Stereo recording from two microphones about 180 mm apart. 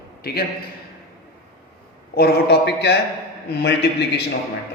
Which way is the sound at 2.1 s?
65° left (ahead or behind).